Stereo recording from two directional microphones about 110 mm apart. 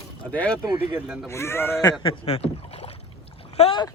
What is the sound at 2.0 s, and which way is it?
Rowboat, 60° left (ahead or behind).